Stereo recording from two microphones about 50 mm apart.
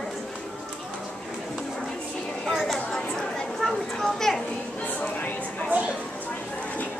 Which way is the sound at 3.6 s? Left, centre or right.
Centre.